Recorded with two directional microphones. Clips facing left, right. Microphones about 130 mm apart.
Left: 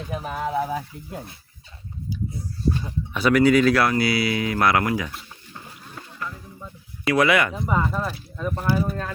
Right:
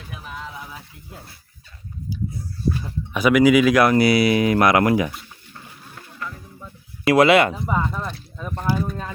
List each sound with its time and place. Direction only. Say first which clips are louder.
0.1 s speech: left 9 dB; 45° left (ahead or behind)
3.1 s speech: right 2 dB; 10° right (ahead or behind)
3.8 s speech: right 6 dB; 20° right (ahead or behind)
6.1 s music: right 1 dB; 10° left (ahead or behind)
7.1 s speech: right 5 dB; 25° right (ahead or behind)
7.8 s speech: left 1 dB; 5° left (ahead or behind)